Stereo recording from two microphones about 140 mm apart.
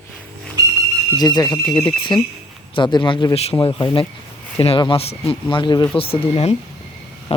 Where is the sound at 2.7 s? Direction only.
35° left (ahead or behind).